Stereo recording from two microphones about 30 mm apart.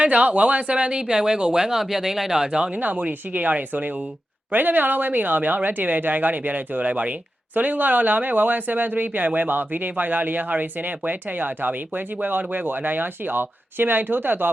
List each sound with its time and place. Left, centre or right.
0.0 s speech: right
1.8 s speech: centre
2.4 s speech: right
2.7 s speech: right
4.5 s speech: right
7.5 s speech: right